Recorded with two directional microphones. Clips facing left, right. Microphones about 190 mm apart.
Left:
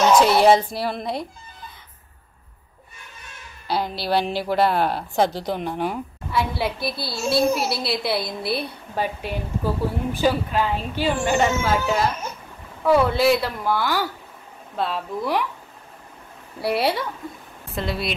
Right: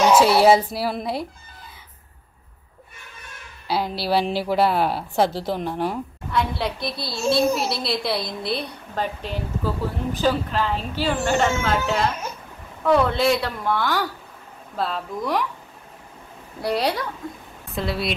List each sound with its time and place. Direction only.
0.0 s speech: 5° right (ahead or behind)
3.6 s a woman's voice: 5° right (ahead or behind)
16.6 s a woman's voice: 5° left (ahead or behind)